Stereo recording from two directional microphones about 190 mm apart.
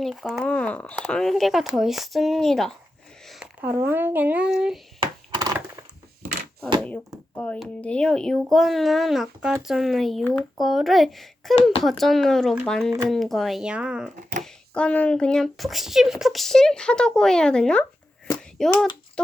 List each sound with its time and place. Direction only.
0.0 s speech: centre (ahead or behind)
3.6 s speech: 10° right (ahead or behind)
4.9 s a sound: 20° right (ahead or behind)
6.7 s a sound: 5° left (ahead or behind)
7.3 s speech: 5° left (ahead or behind)
14.2 s speech: 40° right (ahead or behind)
14.4 s a child's voice: 5° left (ahead or behind)